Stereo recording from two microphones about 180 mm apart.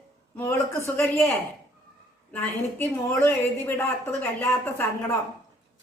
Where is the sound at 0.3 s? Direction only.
15° left (ahead or behind).